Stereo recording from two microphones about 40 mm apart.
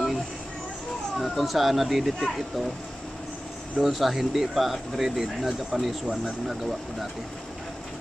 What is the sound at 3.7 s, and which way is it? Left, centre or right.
Speech, centre.